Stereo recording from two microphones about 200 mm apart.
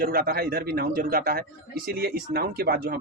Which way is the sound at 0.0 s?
50° right (ahead or behind).